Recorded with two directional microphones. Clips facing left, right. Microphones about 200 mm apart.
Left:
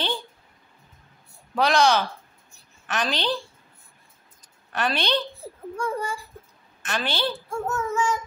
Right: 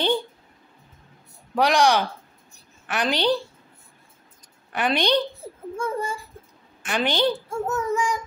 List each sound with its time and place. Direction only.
1.5 s a child's voice: 15° right (ahead or behind)
4.7 s a child's voice: 15° right (ahead or behind)